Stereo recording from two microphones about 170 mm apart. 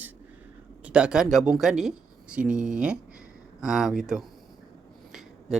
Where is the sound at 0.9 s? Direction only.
5° right (ahead or behind).